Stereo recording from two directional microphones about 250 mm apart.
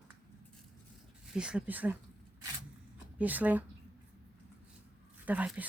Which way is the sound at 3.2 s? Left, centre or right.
Centre.